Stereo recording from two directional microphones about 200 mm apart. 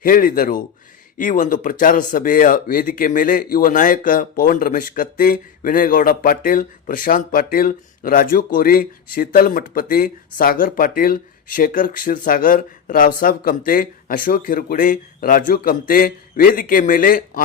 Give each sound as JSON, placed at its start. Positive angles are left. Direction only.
{"t": 0.0, "sound": "speech", "side_deg": 45}